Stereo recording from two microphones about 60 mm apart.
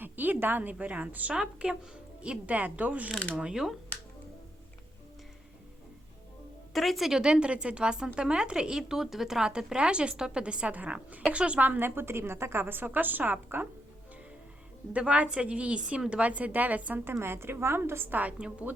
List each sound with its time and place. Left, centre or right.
0.0 s a woman's voice: right
3.3 s a woman's voice: centre
6.7 s a woman's voice: centre
7.2 s a woman's voice: centre; by 13.7 s right
14.9 s a woman's voice: right
17.1 s a woman's voice: right; by 18.5 s centre